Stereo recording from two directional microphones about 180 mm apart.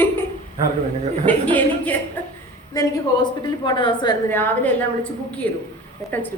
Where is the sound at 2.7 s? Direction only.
20° left (ahead or behind).